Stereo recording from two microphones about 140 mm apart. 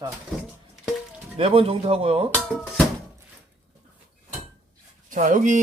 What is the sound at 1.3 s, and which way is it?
Speech, 45° right (ahead or behind).